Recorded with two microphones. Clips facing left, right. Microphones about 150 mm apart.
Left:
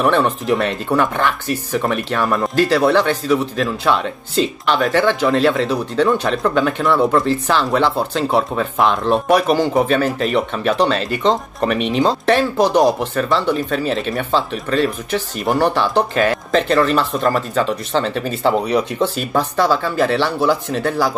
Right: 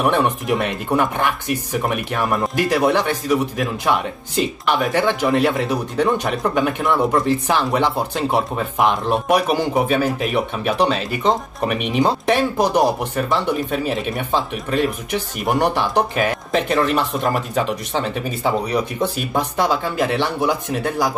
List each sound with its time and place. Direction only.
0.0 s speech: 15° right (ahead or behind)